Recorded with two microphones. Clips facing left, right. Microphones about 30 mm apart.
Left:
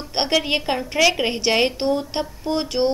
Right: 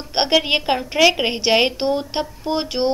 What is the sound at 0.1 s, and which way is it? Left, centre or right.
A woman's voice, right.